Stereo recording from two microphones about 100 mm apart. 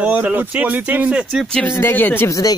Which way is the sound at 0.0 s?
15° right (ahead or behind).